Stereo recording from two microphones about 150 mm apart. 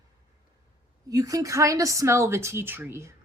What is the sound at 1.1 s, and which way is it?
Speech, 25° right (ahead or behind).